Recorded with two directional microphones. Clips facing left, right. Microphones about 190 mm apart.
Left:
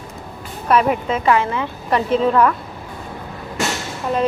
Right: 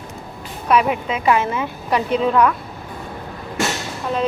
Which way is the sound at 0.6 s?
5° right (ahead or behind).